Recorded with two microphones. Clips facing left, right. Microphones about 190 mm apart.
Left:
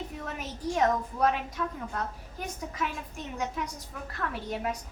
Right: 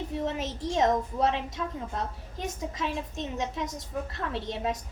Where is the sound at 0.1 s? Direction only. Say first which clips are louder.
Right 7 dB; 25° right (ahead or behind).